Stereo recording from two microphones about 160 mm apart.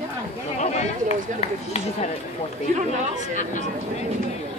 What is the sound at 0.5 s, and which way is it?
Speech, 45° left (ahead or behind).